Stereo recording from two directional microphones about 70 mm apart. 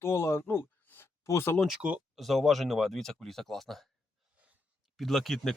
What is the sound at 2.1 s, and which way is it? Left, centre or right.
Speech, centre.